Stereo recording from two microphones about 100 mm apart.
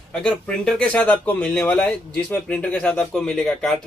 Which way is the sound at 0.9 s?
20° left (ahead or behind).